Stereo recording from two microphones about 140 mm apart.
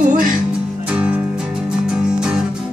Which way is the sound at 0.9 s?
10° right (ahead or behind).